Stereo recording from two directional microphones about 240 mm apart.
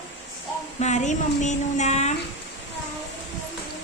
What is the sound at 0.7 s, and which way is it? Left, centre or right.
Speech, left.